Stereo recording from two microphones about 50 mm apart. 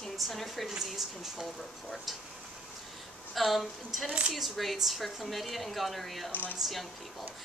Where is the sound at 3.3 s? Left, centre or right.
Centre.